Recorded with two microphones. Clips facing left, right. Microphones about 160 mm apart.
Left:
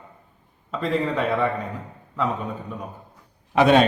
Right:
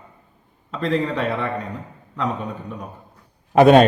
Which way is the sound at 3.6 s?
45° right (ahead or behind).